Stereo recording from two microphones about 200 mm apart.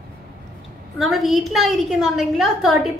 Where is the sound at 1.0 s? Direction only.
Centre (ahead or behind).